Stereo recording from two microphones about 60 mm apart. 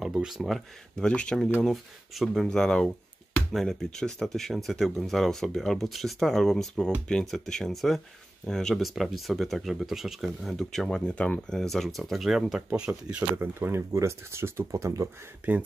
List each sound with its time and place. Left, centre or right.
0.0 s speech: centre
0.9 s speech: centre
1.6 s speech: centre
10.5 s speech: centre; by 11.5 s left
11.5 s speech: centre
13.4 s speech: right
15.4 s speech: right